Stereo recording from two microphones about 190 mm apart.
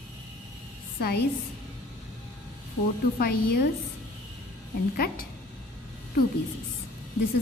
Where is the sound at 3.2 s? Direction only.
60° left (ahead or behind).